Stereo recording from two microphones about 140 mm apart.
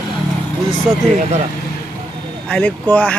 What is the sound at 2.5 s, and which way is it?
Speech, 15° left (ahead or behind).